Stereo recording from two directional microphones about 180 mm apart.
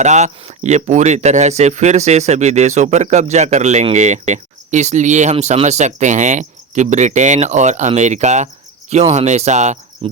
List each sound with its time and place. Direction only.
0.0 s speech: 40° right (ahead or behind)